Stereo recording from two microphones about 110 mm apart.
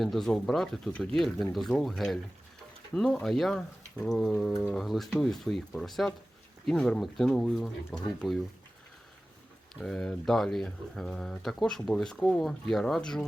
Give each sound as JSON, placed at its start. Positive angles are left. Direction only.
{"t": 0.0, "sound": "speech", "side_deg": 0}
{"t": 9.8, "sound": "speech", "side_deg": 5}